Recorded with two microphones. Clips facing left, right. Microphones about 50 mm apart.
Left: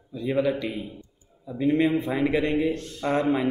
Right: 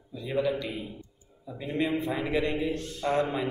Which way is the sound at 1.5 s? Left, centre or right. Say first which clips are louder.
Left 7 dB; left.